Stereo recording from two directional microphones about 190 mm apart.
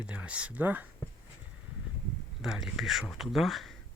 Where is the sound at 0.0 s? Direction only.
5° right (ahead or behind).